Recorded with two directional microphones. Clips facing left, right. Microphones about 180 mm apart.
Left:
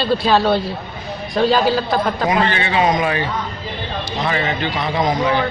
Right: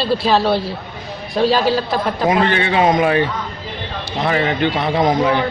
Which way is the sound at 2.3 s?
55° right (ahead or behind).